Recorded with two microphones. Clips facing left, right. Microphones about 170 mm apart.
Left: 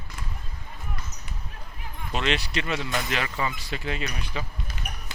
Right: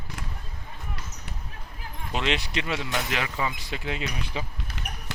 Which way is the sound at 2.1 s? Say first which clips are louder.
Left 1 dB; 15° right (ahead or behind).